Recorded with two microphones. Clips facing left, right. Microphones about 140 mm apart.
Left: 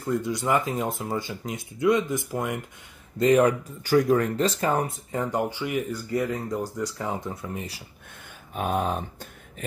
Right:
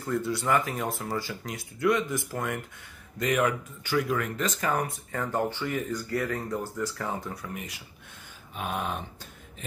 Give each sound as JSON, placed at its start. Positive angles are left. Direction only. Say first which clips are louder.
{"t": 0.0, "sound": "speech", "louder": "left 2 dB", "side_deg": 15}
{"t": 3.2, "sound": "speech", "louder": "left 7 dB", "side_deg": 35}
{"t": 8.5, "sound": "a sound", "louder": "left 6 dB", "side_deg": 40}